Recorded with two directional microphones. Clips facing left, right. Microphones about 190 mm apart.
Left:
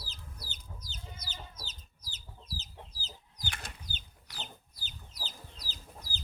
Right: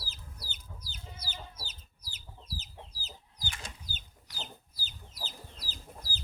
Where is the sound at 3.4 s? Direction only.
65° left (ahead or behind).